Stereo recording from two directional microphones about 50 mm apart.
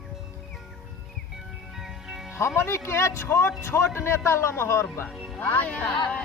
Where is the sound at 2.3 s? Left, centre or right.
Left.